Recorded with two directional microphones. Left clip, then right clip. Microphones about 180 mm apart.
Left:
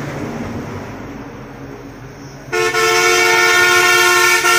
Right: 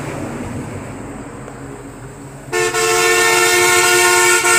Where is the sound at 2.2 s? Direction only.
20° right (ahead or behind).